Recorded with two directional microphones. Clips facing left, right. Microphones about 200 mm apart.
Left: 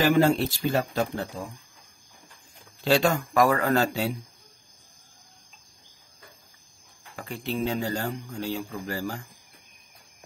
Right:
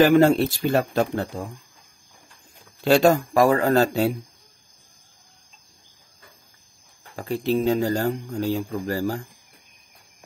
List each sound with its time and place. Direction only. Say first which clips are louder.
0.0 s speech: right 5 dB; 60° right (ahead or behind)
2.8 s speech: right 6 dB; 45° right (ahead or behind)
7.2 s speech: right 7 dB; 35° right (ahead or behind)